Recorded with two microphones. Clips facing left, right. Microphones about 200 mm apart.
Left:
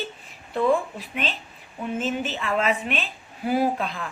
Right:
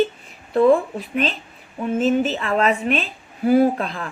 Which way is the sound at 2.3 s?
40° right (ahead or behind).